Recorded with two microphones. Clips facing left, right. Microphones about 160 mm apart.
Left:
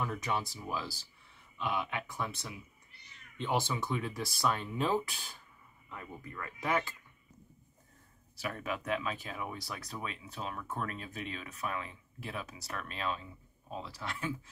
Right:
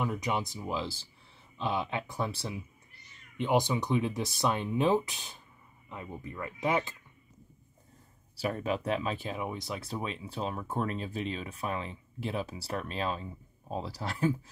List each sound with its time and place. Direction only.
0.0 s speech: 15° right (ahead or behind)
3.3 s speech: 15° right (ahead or behind)
8.4 s speech: 30° right (ahead or behind)